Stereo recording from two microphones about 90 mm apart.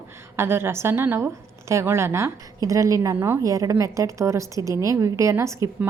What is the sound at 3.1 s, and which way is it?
Speech, 25° right (ahead or behind).